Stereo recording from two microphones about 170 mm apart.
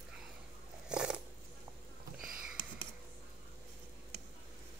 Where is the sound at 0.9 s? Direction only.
5° right (ahead or behind).